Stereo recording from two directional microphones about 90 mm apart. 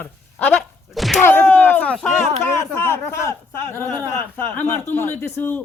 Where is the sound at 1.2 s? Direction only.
20° left (ahead or behind).